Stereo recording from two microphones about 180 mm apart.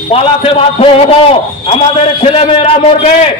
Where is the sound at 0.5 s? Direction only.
30° left (ahead or behind).